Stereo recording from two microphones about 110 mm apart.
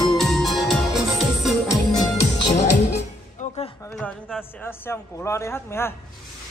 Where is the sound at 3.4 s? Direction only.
90° left.